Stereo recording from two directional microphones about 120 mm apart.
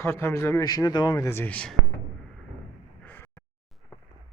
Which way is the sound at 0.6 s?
35° left (ahead or behind).